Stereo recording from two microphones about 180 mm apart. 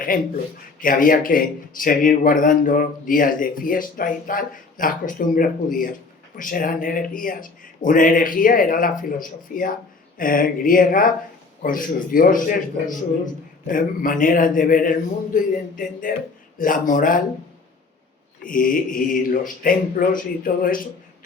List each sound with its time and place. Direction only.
0.1 s a man's voice: 50° left (ahead or behind)
18.4 s a man's voice: 50° left (ahead or behind)